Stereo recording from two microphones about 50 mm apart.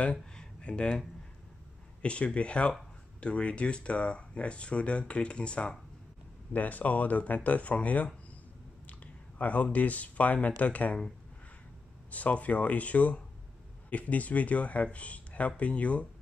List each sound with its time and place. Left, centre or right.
0.0 s a sound: centre
2.0 s speech: left
6.5 s speech: left
12.1 s speech: left